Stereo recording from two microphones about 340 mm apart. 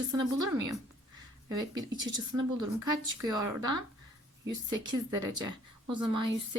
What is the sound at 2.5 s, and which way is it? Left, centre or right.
Speech, right.